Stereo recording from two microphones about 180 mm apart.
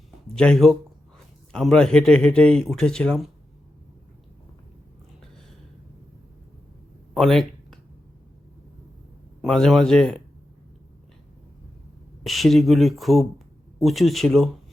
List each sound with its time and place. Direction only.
0.3 s speech: 5° left (ahead or behind)
7.1 s a sound: centre (ahead or behind)
9.4 s speech: centre (ahead or behind)
12.2 s speech: centre (ahead or behind)